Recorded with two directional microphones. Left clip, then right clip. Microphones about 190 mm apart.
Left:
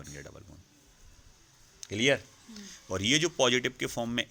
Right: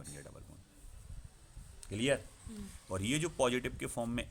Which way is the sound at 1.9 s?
20° left (ahead or behind).